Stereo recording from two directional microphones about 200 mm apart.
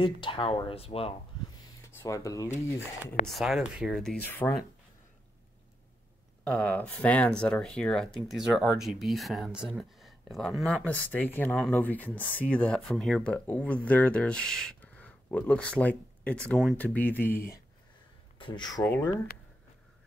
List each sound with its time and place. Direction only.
0.0 s speech: 25° left (ahead or behind)
1.9 s speech: 15° left (ahead or behind)
3.3 s speech: centre (ahead or behind)
6.4 s speech: 5° left (ahead or behind)
18.4 s speech: 20° left (ahead or behind)